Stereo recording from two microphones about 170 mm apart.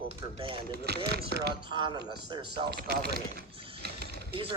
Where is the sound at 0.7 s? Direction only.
70° right (ahead or behind).